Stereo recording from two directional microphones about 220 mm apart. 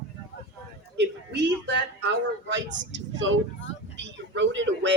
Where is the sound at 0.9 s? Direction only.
50° right (ahead or behind).